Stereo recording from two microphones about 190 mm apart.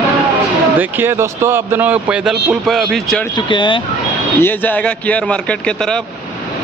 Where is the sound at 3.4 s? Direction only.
25° left (ahead or behind).